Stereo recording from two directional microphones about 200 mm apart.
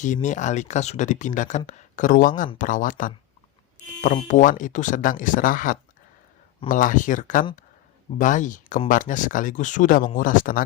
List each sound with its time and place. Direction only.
0.0 s speech: 40° left (ahead or behind)